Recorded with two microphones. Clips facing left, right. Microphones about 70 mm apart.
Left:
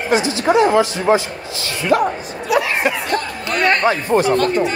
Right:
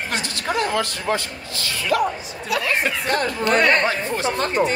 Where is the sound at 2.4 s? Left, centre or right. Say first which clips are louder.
Left 6 dB; left.